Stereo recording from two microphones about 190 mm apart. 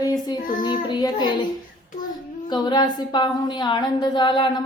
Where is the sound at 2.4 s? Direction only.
20° left (ahead or behind).